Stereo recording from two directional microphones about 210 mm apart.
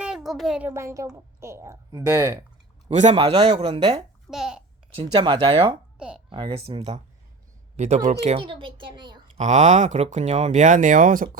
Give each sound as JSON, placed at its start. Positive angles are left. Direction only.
{"t": 0.0, "sound": "a child's voice", "side_deg": 0}
{"t": 2.9, "sound": "a woman's voice", "side_deg": -35}
{"t": 4.3, "sound": "speech", "side_deg": 0}
{"t": 4.9, "sound": "a woman's voice", "side_deg": -20}
{"t": 6.0, "sound": "speech", "side_deg": -5}
{"t": 6.3, "sound": "a woman's voice", "side_deg": -25}
{"t": 9.4, "sound": "speech", "side_deg": -35}